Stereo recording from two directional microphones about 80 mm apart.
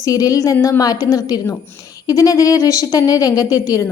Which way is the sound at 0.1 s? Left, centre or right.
Left.